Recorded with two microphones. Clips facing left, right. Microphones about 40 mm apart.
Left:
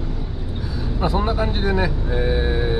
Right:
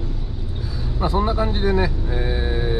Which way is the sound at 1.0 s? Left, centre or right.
Centre.